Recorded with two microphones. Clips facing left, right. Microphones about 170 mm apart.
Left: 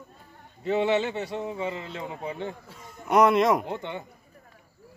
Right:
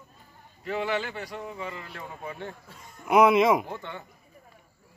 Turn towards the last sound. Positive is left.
turn(degrees=20)  # may be behind; listen again after turning